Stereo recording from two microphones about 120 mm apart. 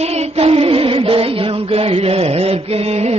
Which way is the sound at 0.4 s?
50° right (ahead or behind).